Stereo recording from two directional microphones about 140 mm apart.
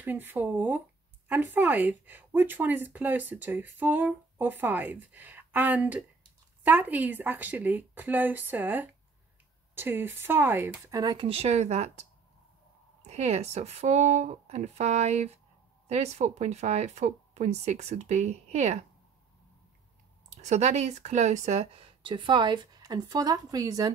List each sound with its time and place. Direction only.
0.0 s speech: 15° right (ahead or behind)
11.2 s speech: 50° right (ahead or behind)
13.0 s speech: 50° right (ahead or behind)
20.2 s speech: 55° right (ahead or behind)
22.0 s speech: 35° right (ahead or behind)